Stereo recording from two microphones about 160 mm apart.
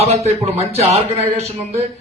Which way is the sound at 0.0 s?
40° right (ahead or behind).